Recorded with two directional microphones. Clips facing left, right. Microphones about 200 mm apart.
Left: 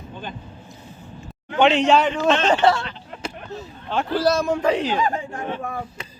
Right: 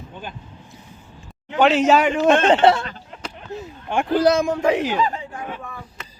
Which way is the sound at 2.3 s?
55° right (ahead or behind).